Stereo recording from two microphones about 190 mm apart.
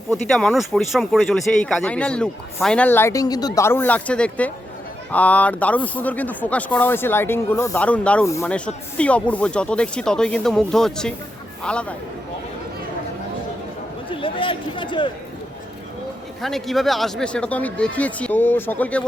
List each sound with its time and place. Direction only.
0.3 s speech: centre (ahead or behind)
14.1 s speech: 25° left (ahead or behind)
16.4 s speech: centre (ahead or behind)